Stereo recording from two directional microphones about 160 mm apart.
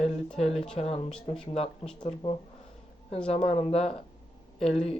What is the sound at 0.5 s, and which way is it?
Speech, 5° left (ahead or behind).